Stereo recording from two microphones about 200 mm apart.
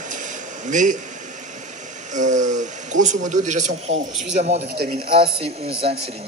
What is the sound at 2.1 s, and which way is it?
Speech, 40° right (ahead or behind).